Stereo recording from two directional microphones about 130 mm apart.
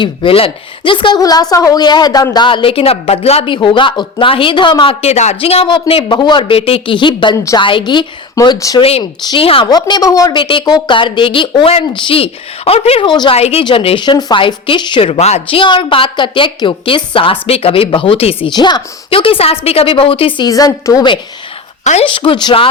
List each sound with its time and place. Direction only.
0.0 s a woman's voice: 40° left (ahead or behind)
1.2 s a woman's voice: 30° left (ahead or behind)
8.5 s a woman's voice: 25° left (ahead or behind)
8.8 s speech: 50° left (ahead or behind)
9.6 s a woman's voice: 35° left (ahead or behind)
10.3 s a woman's voice: 40° left (ahead or behind)
13.4 s speech: 50° left (ahead or behind)
18.4 s speech: 35° left (ahead or behind)
20.5 s a woman's voice: 30° left (ahead or behind)